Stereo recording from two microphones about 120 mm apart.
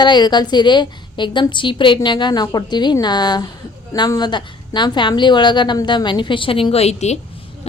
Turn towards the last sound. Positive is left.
turn(degrees=65)  # may be behind; listen again after turning